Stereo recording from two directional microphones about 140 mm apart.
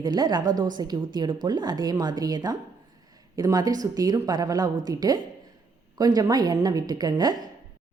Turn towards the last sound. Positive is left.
turn(degrees=-30)  # may be behind; listen again after turning